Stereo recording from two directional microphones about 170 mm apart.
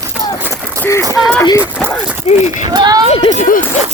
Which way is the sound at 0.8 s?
15° left (ahead or behind).